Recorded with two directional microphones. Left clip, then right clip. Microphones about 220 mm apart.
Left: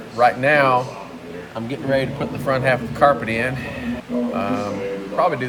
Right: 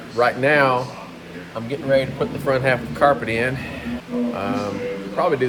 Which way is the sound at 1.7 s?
20° left (ahead or behind).